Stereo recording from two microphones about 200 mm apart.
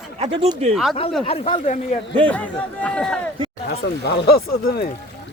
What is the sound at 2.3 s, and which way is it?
Speech, 5° left (ahead or behind).